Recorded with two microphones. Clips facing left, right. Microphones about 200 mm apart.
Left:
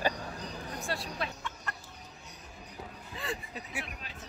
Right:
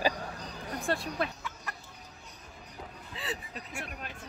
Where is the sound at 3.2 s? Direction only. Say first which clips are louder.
Left 1 dB; centre (ahead or behind).